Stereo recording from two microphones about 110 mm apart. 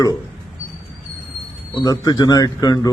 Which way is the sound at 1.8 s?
35° left (ahead or behind).